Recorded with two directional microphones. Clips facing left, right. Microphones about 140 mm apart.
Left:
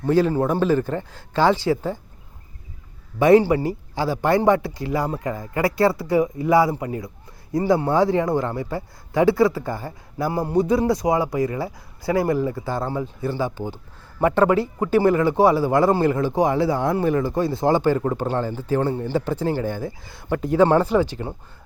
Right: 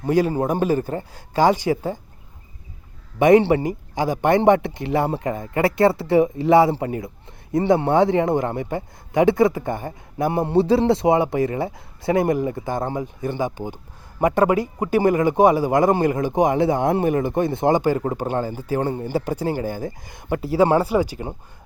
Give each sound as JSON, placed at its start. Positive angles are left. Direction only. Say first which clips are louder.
{"t": 0.0, "sound": "a man's voice", "louder": "left 1 dB", "side_deg": -15}
{"t": 3.2, "sound": "a man's voice", "louder": "right 1 dB", "side_deg": -20}